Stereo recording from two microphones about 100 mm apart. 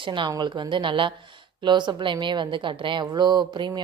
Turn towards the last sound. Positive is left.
turn(degrees=-50)  # may be behind; listen again after turning